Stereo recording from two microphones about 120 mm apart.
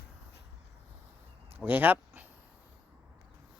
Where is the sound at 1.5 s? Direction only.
15° right (ahead or behind).